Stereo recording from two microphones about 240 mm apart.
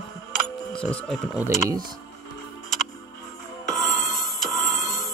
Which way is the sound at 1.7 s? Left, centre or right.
Centre.